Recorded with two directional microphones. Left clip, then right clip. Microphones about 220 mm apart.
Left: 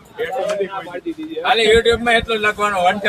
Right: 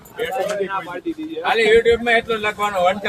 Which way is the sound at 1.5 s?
40° left (ahead or behind).